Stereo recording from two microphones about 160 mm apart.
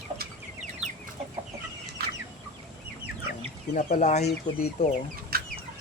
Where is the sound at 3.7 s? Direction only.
55° left (ahead or behind).